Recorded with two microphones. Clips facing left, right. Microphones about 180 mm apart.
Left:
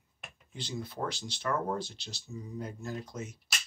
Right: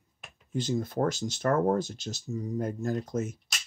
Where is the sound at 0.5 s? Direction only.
45° right (ahead or behind).